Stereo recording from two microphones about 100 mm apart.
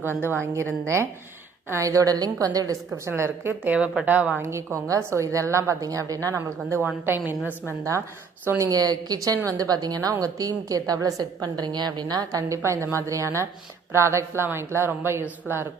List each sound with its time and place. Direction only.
0.5 s a woman's voice: 30° right (ahead or behind)
2.9 s a woman's voice: 25° right (ahead or behind)
4.4 s a woman's voice: 30° right (ahead or behind)
8.4 s a woman's voice: 30° right (ahead or behind)